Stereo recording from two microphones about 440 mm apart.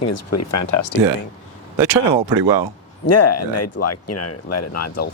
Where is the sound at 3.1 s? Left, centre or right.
Left.